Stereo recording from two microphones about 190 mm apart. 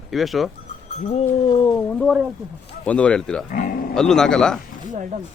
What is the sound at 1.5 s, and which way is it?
Speech, 20° left (ahead or behind).